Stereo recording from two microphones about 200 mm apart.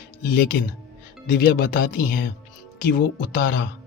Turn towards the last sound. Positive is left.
turn(degrees=50)  # may be behind; listen again after turning